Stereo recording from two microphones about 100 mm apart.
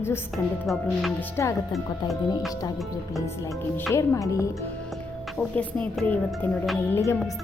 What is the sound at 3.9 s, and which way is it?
Speech, 30° left (ahead or behind).